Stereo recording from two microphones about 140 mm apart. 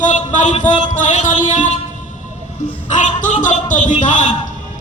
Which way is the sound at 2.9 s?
65° left (ahead or behind).